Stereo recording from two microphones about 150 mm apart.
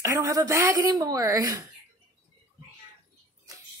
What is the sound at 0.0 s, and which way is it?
Speech, 20° right (ahead or behind).